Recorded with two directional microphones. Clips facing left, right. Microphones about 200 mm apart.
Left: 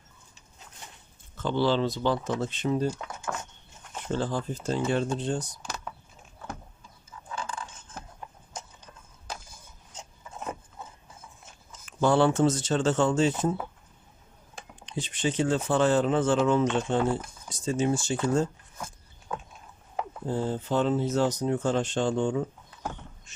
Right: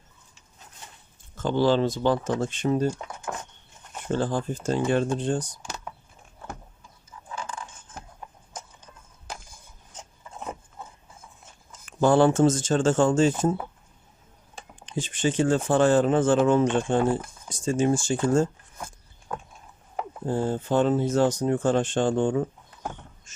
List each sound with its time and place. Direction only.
1.4 s speech: 45° right (ahead or behind)
3.3 s a sound: 20° right (ahead or behind)
4.1 s speech: 50° right (ahead or behind)
11.9 s speech: 50° right (ahead or behind)
14.8 s speech: 50° right (ahead or behind)
20.2 s speech: 50° right (ahead or behind)